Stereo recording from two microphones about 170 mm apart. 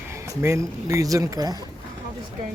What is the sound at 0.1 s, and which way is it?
Speech, 15° right (ahead or behind).